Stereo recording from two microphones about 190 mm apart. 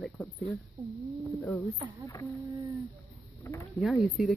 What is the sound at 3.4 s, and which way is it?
Speech, 15° left (ahead or behind).